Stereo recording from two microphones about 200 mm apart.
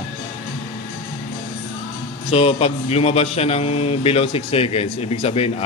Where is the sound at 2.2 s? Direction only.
30° left (ahead or behind).